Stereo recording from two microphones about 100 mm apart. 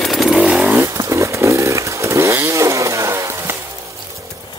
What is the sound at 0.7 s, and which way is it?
Chainsaw, 30° right (ahead or behind).